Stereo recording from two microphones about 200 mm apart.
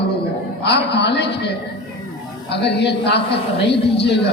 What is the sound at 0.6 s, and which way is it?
A man's voice, 60° left (ahead or behind).